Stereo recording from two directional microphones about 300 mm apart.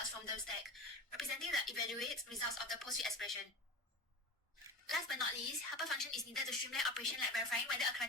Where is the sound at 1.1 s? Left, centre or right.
Centre.